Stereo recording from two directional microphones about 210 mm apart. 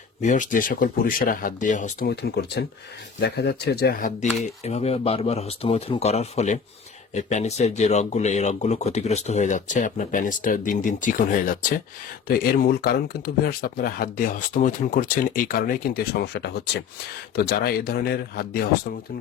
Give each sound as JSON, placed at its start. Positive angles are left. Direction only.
{"t": 0.2, "sound": "speech", "side_deg": 35}